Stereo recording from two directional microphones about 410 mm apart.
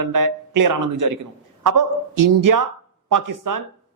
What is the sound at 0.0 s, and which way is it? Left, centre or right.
Speech, right.